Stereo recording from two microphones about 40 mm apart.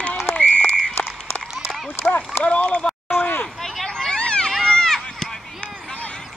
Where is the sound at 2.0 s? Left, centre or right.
Centre.